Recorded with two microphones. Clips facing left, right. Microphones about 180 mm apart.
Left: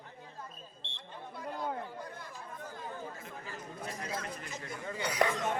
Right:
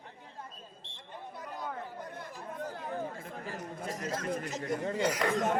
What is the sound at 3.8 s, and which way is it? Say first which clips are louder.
Chatter: right 3 dB; 45° right (ahead or behind).